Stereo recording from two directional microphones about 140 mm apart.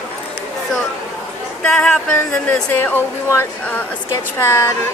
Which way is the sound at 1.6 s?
10° left (ahead or behind).